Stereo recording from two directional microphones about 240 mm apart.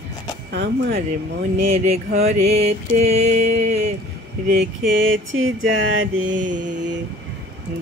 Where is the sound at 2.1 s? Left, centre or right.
Right.